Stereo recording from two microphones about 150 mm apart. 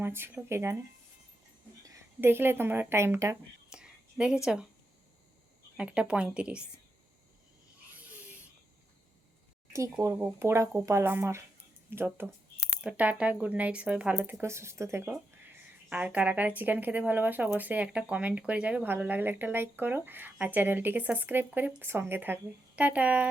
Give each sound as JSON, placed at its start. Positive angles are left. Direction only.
{"t": 0.0, "sound": "speech", "side_deg": -15}
{"t": 1.8, "sound": "speech", "side_deg": -20}
{"t": 3.7, "sound": "whispering", "side_deg": -5}
{"t": 5.7, "sound": "speech", "side_deg": -5}
{"t": 10.0, "sound": "speech", "side_deg": -20}